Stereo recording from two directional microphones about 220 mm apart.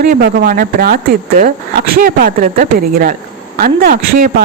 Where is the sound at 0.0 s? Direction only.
40° right (ahead or behind).